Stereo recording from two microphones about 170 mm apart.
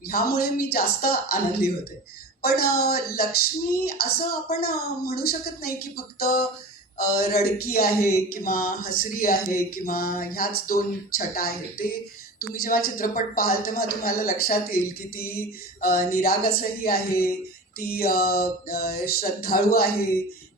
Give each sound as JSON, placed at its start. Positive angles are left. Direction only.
{"t": 0.1, "sound": "speech", "side_deg": 65}
{"t": 7.9, "sound": "speech", "side_deg": 15}
{"t": 8.3, "sound": "speech", "side_deg": 55}